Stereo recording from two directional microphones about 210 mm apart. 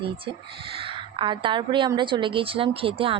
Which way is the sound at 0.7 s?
25° right (ahead or behind).